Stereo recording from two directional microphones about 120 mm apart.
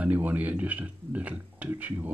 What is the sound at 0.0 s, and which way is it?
Speech, 10° right (ahead or behind).